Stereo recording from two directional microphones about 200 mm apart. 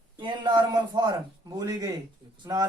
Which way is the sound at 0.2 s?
20° right (ahead or behind).